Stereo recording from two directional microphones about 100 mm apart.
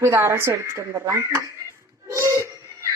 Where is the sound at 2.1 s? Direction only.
30° right (ahead or behind).